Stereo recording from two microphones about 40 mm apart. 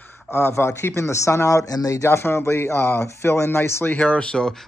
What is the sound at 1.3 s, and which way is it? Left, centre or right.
Speech, left.